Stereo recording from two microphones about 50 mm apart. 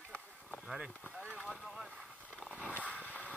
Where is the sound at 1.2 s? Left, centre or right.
Left.